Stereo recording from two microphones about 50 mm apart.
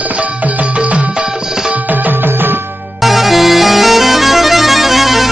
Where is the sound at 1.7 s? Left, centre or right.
Right.